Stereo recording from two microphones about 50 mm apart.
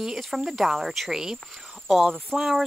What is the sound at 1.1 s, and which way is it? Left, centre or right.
Cricket, centre.